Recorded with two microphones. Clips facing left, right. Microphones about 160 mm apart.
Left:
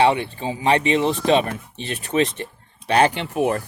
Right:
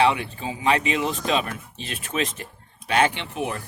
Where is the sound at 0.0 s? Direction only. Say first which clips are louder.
Left 3 dB; 30° left (ahead or behind).